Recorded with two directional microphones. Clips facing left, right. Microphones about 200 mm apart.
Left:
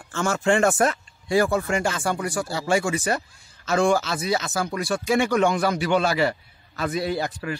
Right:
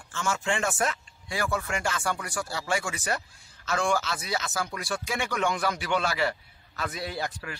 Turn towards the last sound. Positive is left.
turn(degrees=25)  # may be behind; listen again after turning